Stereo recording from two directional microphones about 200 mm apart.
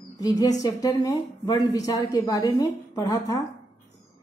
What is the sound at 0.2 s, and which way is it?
A woman's voice, 20° left (ahead or behind).